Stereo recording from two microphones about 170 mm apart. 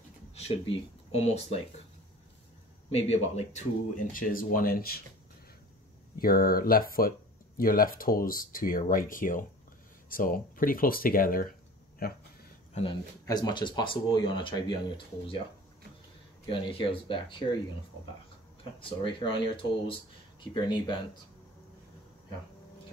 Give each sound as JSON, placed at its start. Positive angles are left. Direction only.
{"t": 0.3, "sound": "speech", "side_deg": 35}
{"t": 2.9, "sound": "speech", "side_deg": 40}
{"t": 6.1, "sound": "speech", "side_deg": 60}
{"t": 12.7, "sound": "speech", "side_deg": 30}
{"t": 16.4, "sound": "speech", "side_deg": 30}
{"t": 18.6, "sound": "speech", "side_deg": 30}